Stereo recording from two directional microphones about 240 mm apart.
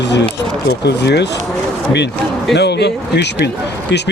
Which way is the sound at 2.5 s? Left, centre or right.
Left.